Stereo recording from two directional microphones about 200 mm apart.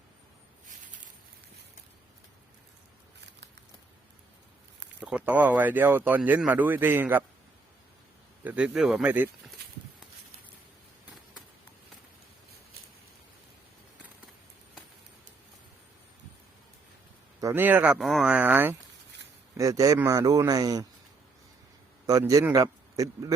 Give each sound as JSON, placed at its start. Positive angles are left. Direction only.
{"t": 4.9, "sound": "speech", "side_deg": -5}
{"t": 8.4, "sound": "speech", "side_deg": -5}
{"t": 17.4, "sound": "speech", "side_deg": -10}
{"t": 22.0, "sound": "a man's voice", "side_deg": -15}